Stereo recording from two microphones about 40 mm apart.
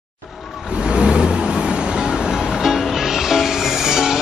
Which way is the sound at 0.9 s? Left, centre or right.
Right.